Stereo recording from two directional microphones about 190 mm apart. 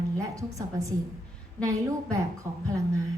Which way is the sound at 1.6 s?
15° right (ahead or behind).